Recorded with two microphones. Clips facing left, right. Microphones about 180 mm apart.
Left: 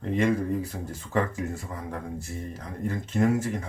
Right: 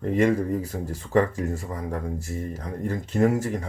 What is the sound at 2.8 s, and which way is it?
Speech, 35° right (ahead or behind).